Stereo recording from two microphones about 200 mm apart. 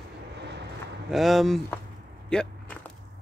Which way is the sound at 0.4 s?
60° right (ahead or behind).